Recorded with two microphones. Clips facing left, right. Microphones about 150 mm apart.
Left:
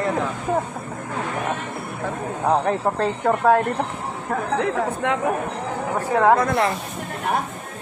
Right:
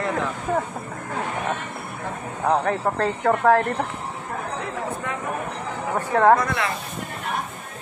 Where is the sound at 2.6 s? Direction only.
15° left (ahead or behind).